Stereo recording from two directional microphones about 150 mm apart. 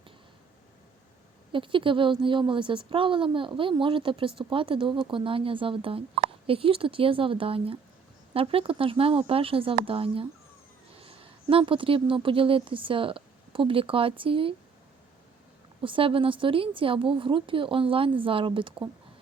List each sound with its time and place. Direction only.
1.5 s a woman's voice: 35° right (ahead or behind)
15.8 s speech: 35° right (ahead or behind)